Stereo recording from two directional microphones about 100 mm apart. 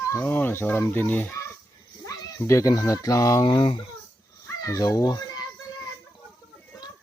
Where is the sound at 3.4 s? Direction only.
50° left (ahead or behind).